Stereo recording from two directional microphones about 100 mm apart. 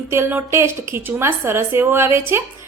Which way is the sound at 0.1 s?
25° right (ahead or behind).